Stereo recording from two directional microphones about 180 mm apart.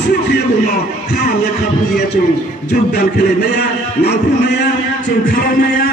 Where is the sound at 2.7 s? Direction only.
60° left (ahead or behind).